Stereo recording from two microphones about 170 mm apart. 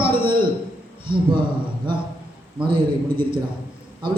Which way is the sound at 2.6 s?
30° right (ahead or behind).